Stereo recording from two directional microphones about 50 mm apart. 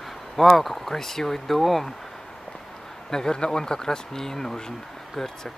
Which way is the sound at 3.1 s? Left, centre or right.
Centre.